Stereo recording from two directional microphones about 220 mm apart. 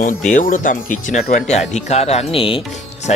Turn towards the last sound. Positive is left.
turn(degrees=30)  # may be behind; listen again after turning